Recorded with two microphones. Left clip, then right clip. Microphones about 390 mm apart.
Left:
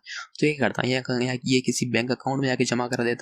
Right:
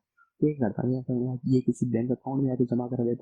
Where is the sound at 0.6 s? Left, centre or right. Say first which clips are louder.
Left 6 dB; left.